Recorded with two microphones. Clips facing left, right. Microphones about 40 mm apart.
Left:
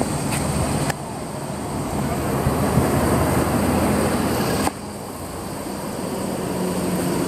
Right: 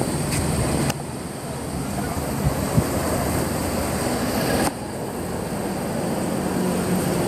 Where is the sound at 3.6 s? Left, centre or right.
Left.